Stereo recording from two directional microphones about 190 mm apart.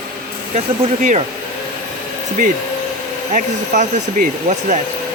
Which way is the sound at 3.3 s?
40° right (ahead or behind).